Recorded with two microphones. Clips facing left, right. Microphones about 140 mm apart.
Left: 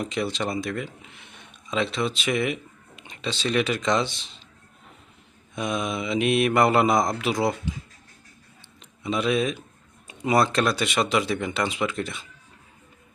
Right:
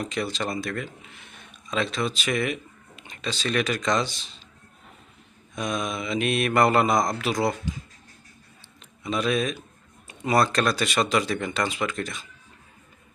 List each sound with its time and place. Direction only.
0.0 s mantra: 20° left (ahead or behind)
1.3 s speech: 20° left (ahead or behind)
5.5 s mantra: 20° left (ahead or behind)
6.5 s mantra: 10° left (ahead or behind)
9.0 s mantra: 20° left (ahead or behind)
10.1 s speech: 20° left (ahead or behind)
11.1 s mantra: 20° left (ahead or behind)